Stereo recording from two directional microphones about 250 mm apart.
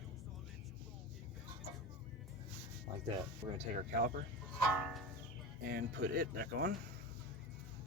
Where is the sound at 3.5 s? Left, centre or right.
Right.